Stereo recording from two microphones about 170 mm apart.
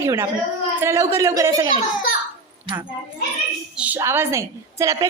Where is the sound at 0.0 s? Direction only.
15° right (ahead or behind).